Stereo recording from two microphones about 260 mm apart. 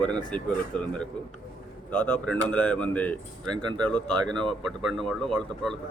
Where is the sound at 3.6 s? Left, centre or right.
Centre.